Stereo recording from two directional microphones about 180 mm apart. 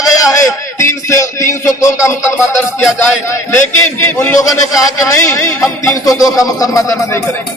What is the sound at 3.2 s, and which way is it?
A man's voice, 15° left (ahead or behind).